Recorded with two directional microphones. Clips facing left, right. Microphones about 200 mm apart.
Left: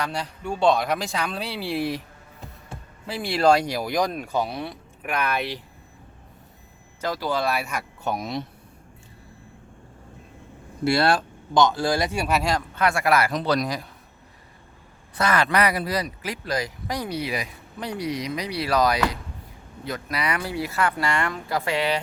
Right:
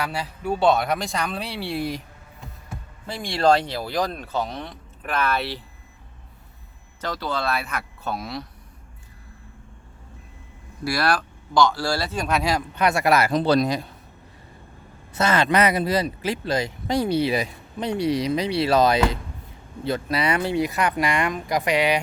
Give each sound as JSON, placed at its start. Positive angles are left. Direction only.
{"t": 0.0, "sound": "speech", "side_deg": -5}
{"t": 3.1, "sound": "speech", "side_deg": 5}
{"t": 7.0, "sound": "speech", "side_deg": 10}
{"t": 10.8, "sound": "speech", "side_deg": 25}
{"t": 12.7, "sound": "speech", "side_deg": -20}
{"t": 15.1, "sound": "speech", "side_deg": -25}